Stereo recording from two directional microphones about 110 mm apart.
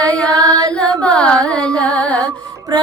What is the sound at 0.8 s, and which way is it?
Carnatic music, 10° left (ahead or behind).